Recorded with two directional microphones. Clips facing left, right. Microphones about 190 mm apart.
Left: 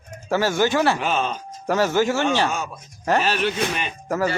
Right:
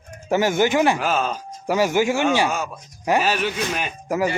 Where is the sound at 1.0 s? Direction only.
5° right (ahead or behind).